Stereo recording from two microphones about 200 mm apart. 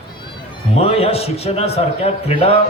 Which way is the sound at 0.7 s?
30° left (ahead or behind).